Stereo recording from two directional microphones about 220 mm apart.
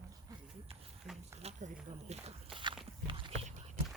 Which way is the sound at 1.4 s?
30° right (ahead or behind).